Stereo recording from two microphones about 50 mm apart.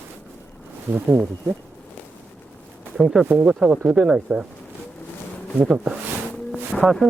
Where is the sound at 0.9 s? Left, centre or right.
Right.